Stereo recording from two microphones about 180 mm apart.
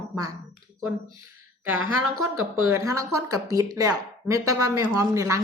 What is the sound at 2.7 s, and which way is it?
Speech, 15° right (ahead or behind).